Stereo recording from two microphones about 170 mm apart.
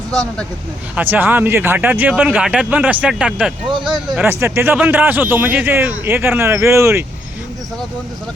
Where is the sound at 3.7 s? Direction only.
25° right (ahead or behind).